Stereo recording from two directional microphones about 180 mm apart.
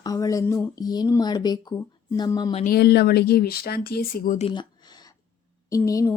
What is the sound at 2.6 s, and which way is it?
Speech, 60° left (ahead or behind).